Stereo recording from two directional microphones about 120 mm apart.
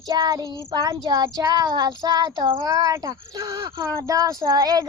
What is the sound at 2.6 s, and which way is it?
Speech, 30° right (ahead or behind).